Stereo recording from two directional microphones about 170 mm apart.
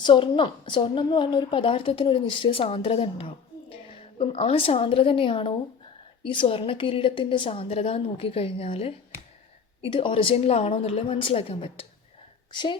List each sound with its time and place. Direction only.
0.0 s a woman's voice: 30° left (ahead or behind)